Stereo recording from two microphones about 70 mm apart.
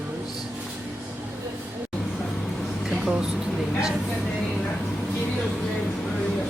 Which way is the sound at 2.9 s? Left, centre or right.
Centre.